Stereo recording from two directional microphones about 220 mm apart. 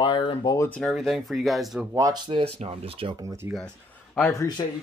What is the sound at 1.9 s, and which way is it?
Speech, 15° right (ahead or behind).